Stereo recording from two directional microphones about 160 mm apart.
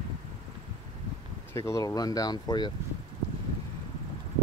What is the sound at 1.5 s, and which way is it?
Speech, 20° left (ahead or behind).